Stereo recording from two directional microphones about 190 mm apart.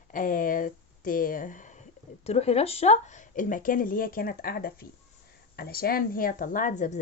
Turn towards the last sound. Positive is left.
turn(degrees=40)  # may be behind; listen again after turning